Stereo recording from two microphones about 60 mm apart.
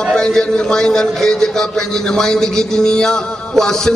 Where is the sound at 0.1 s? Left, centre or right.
Centre.